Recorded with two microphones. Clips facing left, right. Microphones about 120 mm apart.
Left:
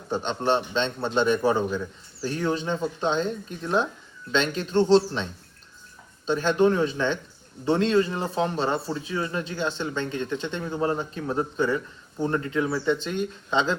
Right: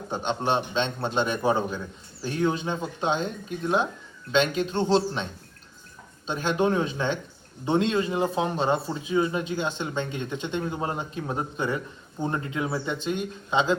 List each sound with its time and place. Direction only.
0.1 s a man's voice: 10° right (ahead or behind)
6.2 s a man's voice: 10° right (ahead or behind)